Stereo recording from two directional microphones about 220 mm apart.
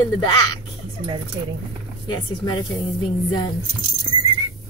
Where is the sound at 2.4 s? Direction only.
20° left (ahead or behind).